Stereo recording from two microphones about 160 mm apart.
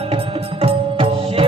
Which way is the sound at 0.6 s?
35° right (ahead or behind).